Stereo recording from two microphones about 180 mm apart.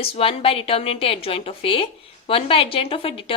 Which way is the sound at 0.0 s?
30° left (ahead or behind).